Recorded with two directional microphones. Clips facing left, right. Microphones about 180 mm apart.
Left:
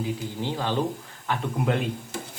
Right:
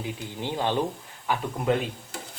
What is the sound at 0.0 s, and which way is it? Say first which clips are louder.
Speech: left 3 dB; 20° right (ahead or behind).